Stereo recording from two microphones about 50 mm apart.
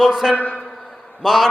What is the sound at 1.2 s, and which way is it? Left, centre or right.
Speech, centre.